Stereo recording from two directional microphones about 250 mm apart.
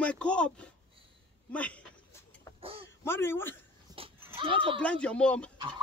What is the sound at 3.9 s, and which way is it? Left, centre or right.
Goat, centre.